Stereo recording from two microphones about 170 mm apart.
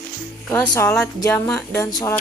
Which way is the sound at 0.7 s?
15° left (ahead or behind).